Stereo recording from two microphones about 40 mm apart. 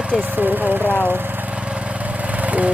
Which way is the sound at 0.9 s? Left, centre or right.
Left.